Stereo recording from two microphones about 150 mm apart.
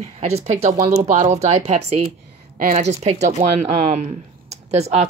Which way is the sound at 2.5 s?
55° right (ahead or behind).